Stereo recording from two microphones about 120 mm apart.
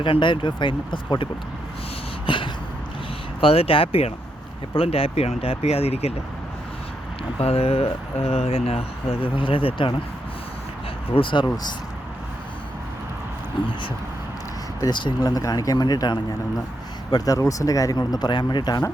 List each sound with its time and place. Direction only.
0.0 s speech: 45° left (ahead or behind)
2.2 s a sound: 45° left (ahead or behind)
3.4 s speech: 50° left (ahead or behind)
7.3 s speech: 55° left (ahead or behind)
11.1 s speech: 45° left (ahead or behind)
14.8 s speech: 40° left (ahead or behind)